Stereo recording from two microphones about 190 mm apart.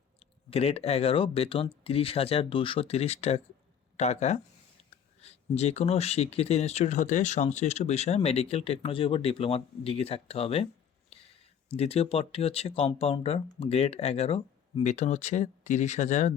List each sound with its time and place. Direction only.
0.5 s speech: 30° left (ahead or behind)
11.1 s a sound: 30° left (ahead or behind)
11.7 s speech: 30° left (ahead or behind)